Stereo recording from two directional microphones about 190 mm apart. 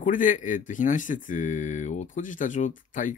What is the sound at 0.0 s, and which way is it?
Speech, 45° left (ahead or behind).